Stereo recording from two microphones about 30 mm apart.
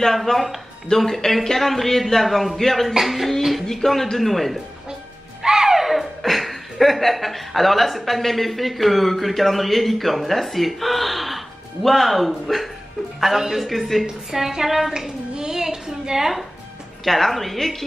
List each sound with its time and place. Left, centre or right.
0.0 s a woman's voice: centre
3.0 s a woman's voice: centre
3.6 s a woman's voice: centre
5.4 s speech: centre
13.2 s speech: centre
13.7 s a woman's voice: centre
14.3 s speech: centre
15.3 s a sound: right
17.0 s a woman's voice: centre